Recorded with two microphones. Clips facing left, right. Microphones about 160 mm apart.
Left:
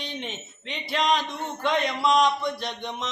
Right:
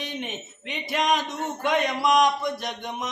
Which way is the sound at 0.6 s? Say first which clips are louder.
Even; 50° right (ahead or behind).